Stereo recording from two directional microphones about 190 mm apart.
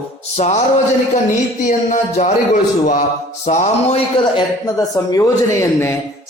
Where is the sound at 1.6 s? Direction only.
45° left (ahead or behind).